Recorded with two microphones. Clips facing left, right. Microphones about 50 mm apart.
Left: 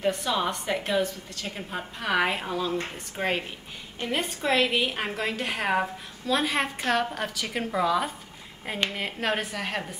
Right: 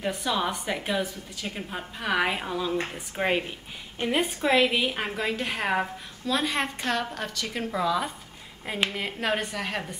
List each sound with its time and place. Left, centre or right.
0.0 s a woman's voice: centre